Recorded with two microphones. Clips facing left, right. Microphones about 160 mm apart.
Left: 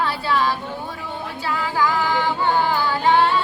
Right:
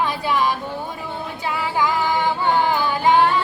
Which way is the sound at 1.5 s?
20° right (ahead or behind).